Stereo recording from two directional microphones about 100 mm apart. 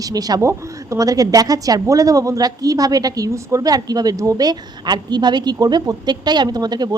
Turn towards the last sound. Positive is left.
turn(degrees=-45)  # may be behind; listen again after turning